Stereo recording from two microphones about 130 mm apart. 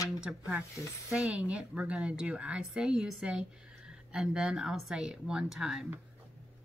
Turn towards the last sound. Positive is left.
turn(degrees=-5)  # may be behind; listen again after turning